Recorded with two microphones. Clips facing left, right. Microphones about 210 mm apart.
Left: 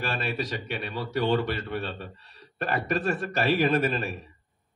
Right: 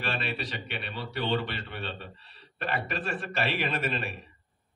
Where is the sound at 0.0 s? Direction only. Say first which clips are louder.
Left 3 dB; 45° left (ahead or behind).